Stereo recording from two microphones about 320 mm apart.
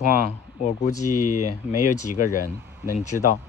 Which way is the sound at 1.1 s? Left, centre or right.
Left.